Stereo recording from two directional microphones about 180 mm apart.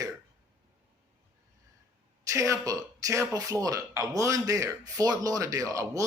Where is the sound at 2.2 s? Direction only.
15° right (ahead or behind).